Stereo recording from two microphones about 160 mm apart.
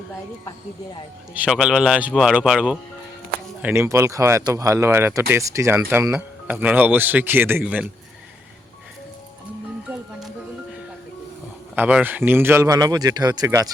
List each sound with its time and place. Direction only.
1.3 s speech: 5° right (ahead or behind)
11.7 s speech: 10° right (ahead or behind)